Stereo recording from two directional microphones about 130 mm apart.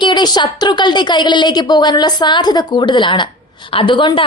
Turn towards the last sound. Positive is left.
turn(degrees=35)  # may be behind; listen again after turning